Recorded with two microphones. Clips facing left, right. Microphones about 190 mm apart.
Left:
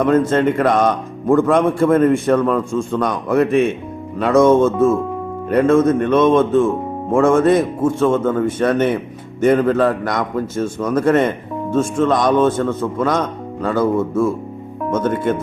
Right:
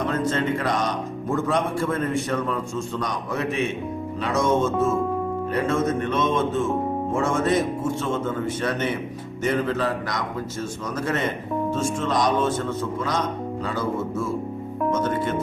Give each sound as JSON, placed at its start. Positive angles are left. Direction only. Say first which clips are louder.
{"t": 0.0, "sound": "speech", "louder": "left 9 dB", "side_deg": 55}